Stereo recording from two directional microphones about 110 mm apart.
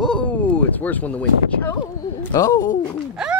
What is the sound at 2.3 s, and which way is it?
Speech, 30° left (ahead or behind).